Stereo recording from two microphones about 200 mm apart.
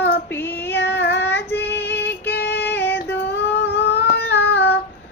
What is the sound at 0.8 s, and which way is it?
Child singing, 55° left (ahead or behind).